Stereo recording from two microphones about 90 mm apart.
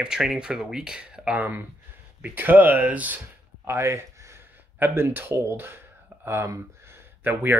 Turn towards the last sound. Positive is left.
turn(degrees=-20)  # may be behind; listen again after turning